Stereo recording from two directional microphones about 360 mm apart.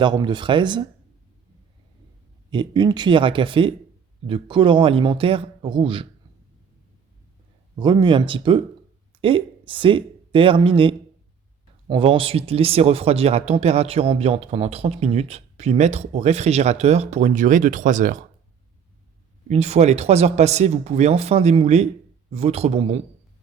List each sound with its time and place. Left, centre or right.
0.0 s speech: centre
2.5 s speech: centre
7.8 s speech: centre
19.5 s speech: centre